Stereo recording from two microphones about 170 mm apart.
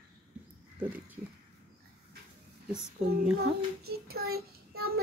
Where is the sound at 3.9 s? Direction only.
65° right (ahead or behind).